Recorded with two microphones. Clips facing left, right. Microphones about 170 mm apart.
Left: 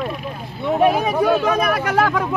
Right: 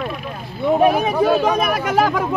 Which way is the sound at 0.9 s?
15° right (ahead or behind).